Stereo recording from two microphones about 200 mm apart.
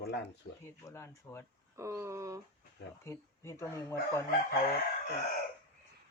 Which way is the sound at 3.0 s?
15° left (ahead or behind).